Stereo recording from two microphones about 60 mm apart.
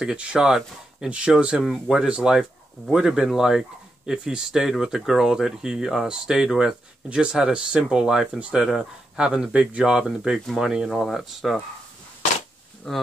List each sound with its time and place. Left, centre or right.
0.0 s speech: centre
12.9 s speech: centre